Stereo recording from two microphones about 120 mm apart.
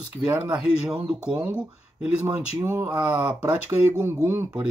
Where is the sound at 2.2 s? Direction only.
20° right (ahead or behind).